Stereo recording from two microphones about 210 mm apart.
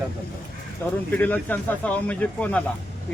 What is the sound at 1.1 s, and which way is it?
Speech, 10° left (ahead or behind).